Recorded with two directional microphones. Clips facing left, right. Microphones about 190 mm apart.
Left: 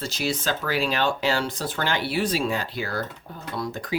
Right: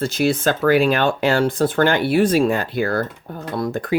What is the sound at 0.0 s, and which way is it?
Speech, 55° right (ahead or behind).